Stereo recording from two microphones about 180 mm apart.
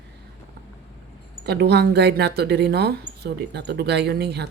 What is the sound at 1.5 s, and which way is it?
Speech, 65° right (ahead or behind).